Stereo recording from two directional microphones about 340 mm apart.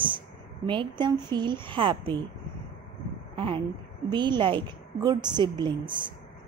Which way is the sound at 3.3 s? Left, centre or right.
Centre.